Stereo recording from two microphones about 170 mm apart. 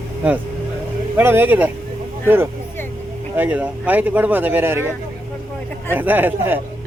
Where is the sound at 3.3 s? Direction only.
10° right (ahead or behind).